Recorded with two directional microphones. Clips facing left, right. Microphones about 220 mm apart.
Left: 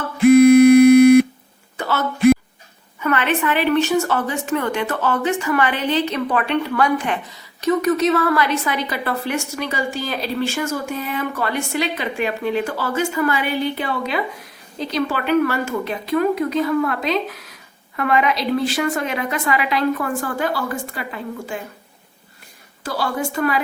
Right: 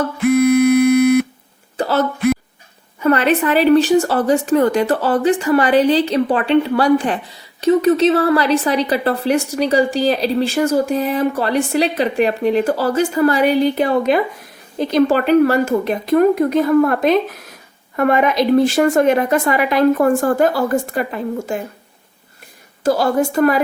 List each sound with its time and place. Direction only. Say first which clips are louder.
1.7 s a sound: right 6 dB; 35° right (ahead or behind)
3.0 s a woman's voice: right 5 dB; 35° right (ahead or behind)
22.8 s a woman's voice: right 8 dB; 45° right (ahead or behind)